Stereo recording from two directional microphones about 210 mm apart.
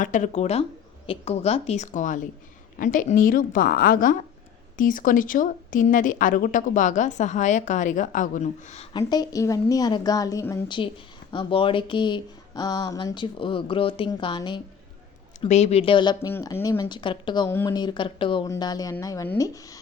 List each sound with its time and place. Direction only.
0.0 s speech: 35° left (ahead or behind)
9.0 s speech: 20° left (ahead or behind)
15.4 s speech: 30° left (ahead or behind); by 19.8 s 15° left (ahead or behind)